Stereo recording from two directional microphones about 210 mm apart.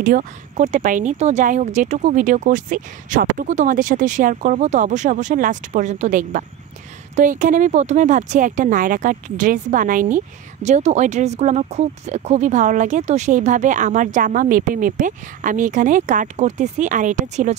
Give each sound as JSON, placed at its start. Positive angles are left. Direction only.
{"t": 0.0, "sound": "speech", "side_deg": -40}